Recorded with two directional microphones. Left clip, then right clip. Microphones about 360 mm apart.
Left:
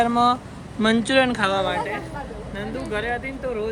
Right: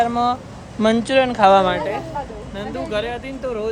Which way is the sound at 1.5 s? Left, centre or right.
Right.